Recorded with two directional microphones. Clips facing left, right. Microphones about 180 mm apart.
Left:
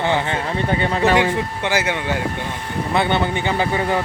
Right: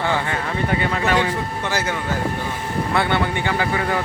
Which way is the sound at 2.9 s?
20° left (ahead or behind).